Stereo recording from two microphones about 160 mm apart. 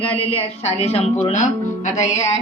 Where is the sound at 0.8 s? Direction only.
40° left (ahead or behind).